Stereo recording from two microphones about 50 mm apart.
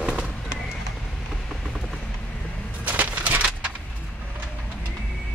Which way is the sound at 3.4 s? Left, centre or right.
Centre.